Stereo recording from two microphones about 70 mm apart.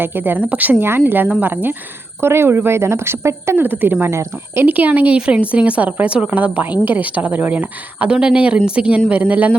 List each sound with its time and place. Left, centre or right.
0.0 s a woman's voice: right
4.0 s a woman's voice: right
4.6 s a woman's voice: right